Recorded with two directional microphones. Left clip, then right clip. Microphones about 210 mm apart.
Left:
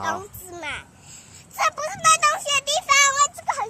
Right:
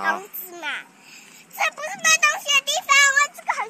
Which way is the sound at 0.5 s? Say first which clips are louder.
Right 3 dB; 55° left (ahead or behind).